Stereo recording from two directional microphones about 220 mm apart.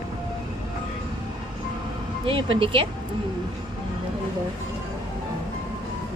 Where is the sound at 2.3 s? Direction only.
25° right (ahead or behind).